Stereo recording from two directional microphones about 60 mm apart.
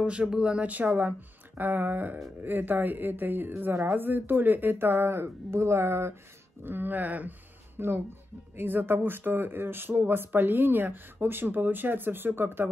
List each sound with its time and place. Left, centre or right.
0.0 s speech: centre; by 6.1 s right
6.6 s speech: right